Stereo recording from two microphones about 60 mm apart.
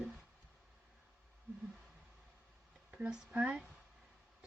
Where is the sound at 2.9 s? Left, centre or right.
Centre.